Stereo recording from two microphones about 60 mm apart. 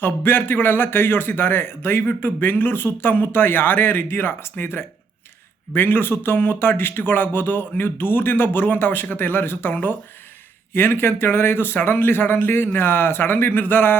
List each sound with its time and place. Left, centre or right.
0.0 s a man's voice: left